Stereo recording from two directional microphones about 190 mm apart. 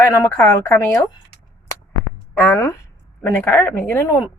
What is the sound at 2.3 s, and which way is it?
Speech, 10° left (ahead or behind).